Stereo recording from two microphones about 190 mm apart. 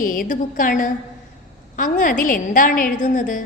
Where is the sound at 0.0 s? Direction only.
45° left (ahead or behind).